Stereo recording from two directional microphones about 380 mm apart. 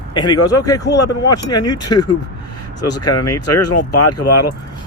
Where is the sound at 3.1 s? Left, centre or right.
Left.